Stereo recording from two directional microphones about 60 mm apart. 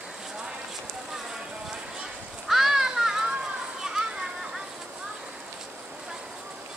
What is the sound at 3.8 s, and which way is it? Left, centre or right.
Children playing, centre.